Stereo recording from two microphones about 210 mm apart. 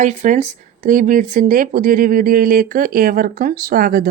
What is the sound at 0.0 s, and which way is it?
Speech, 35° right (ahead or behind).